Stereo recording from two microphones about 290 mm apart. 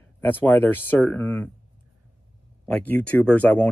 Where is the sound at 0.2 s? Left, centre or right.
Centre.